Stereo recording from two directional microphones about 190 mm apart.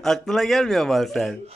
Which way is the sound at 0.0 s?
Centre (ahead or behind).